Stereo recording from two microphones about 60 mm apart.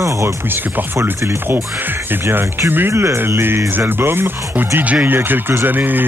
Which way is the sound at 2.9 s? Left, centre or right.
Right.